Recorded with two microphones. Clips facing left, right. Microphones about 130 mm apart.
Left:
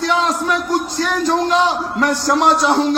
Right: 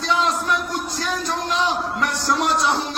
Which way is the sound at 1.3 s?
60° left (ahead or behind).